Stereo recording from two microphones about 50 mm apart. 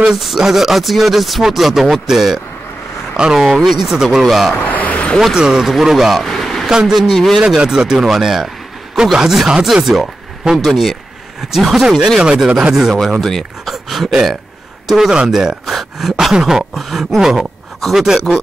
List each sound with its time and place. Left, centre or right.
0.0 s speech: centre
4.6 s a sound: left
5.2 s speech: centre
6.2 s a sound: centre
6.7 s speech: centre
7.4 s speech: centre
12.4 s speech: right
12.9 s speech: centre